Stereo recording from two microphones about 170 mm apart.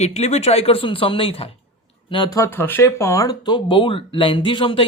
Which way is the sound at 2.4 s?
15° left (ahead or behind).